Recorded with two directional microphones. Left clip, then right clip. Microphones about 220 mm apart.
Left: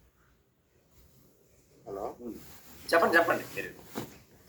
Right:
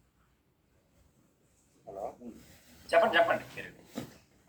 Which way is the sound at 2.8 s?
60° left (ahead or behind).